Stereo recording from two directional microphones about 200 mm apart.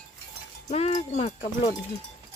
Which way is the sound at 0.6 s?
35° left (ahead or behind).